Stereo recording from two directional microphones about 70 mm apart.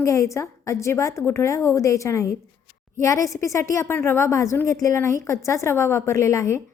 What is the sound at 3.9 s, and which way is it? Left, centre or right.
A woman's voice, left.